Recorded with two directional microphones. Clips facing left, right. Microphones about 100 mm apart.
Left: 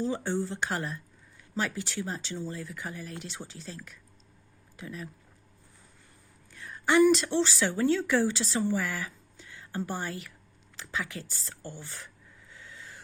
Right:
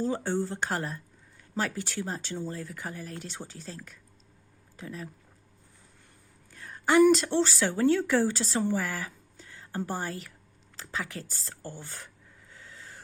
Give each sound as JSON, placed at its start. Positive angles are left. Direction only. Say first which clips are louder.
{"t": 0.0, "sound": "speech", "louder": "right 1 dB", "side_deg": -40}
{"t": 6.5, "sound": "a woman's voice", "louder": "right 1 dB", "side_deg": -40}
{"t": 12.5, "sound": "owl", "louder": "even", "side_deg": -40}